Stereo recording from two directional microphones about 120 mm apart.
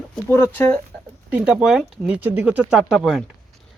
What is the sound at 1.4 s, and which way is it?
Speech, 5° right (ahead or behind).